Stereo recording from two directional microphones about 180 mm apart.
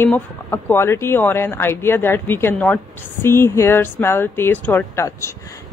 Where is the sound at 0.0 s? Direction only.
10° left (ahead or behind).